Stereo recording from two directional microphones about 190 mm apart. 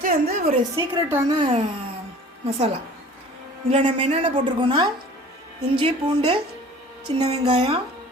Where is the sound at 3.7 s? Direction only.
30° right (ahead or behind).